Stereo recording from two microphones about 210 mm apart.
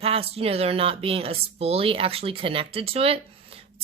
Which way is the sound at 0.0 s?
30° right (ahead or behind).